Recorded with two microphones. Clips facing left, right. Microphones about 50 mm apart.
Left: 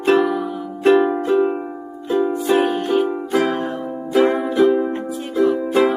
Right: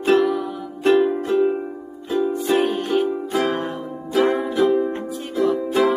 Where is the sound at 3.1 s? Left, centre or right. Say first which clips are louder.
Left 3 dB; left.